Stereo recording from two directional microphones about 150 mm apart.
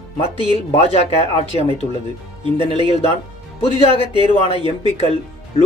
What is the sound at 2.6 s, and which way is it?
Speech, 40° left (ahead or behind).